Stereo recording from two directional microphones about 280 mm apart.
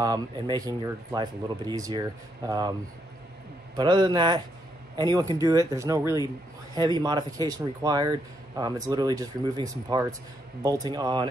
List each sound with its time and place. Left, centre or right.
0.0 s a man's voice: centre
3.7 s a man's voice: centre